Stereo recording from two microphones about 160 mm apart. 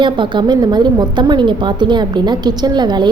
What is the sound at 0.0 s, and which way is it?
A woman's voice, 30° right (ahead or behind).